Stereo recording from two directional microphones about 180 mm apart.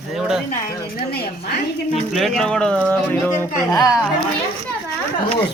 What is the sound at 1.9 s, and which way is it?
Speech, centre (ahead or behind).